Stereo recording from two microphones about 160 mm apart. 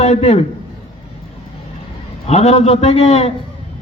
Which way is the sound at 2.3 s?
45° left (ahead or behind).